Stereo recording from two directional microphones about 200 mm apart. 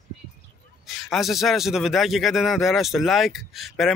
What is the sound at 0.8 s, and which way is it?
A man's voice, centre (ahead or behind).